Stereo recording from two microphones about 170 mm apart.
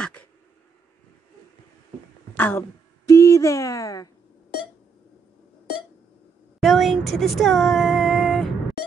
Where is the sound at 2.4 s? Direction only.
10° left (ahead or behind).